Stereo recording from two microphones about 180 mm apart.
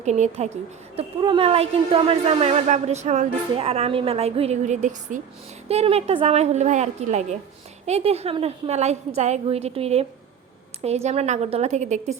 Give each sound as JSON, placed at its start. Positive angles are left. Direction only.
{"t": 0.0, "sound": "speech", "side_deg": -40}
{"t": 0.9, "sound": "speech", "side_deg": -30}